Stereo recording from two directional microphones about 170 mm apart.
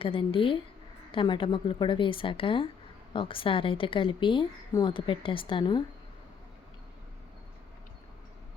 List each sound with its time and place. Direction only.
0.0 s speech: 30° left (ahead or behind)